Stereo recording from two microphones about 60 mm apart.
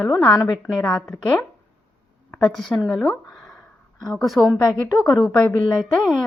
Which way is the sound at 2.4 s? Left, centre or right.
Centre.